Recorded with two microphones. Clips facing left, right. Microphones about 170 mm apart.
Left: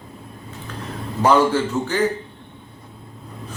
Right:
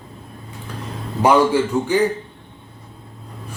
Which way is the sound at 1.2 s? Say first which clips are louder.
Right 2 dB; 10° right (ahead or behind).